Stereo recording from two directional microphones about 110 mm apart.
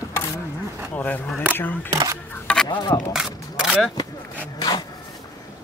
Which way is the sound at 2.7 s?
45° left (ahead or behind).